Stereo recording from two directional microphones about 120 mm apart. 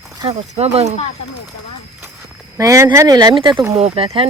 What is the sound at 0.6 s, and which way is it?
Speech, 65° right (ahead or behind).